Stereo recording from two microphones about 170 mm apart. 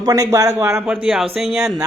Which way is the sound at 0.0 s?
20° right (ahead or behind).